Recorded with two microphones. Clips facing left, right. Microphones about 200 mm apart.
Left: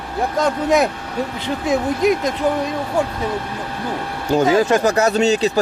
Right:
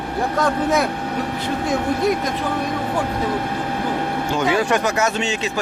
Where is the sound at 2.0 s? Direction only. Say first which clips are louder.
Left 4 dB; 20° left (ahead or behind).